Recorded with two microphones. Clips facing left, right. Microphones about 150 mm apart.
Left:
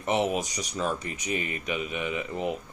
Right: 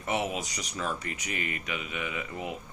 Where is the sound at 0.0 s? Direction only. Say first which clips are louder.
Left 5 dB; 25° left (ahead or behind).